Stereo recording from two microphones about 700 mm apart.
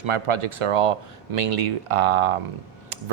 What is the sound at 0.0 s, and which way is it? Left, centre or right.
Speech, right.